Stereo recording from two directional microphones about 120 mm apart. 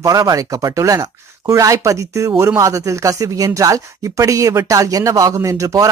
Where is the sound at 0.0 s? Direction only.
30° right (ahead or behind).